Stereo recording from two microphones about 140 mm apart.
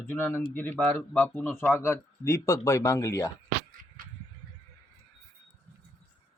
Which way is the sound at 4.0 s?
85° right.